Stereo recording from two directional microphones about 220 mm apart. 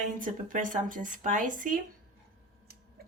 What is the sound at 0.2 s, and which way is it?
Speech, 35° right (ahead or behind).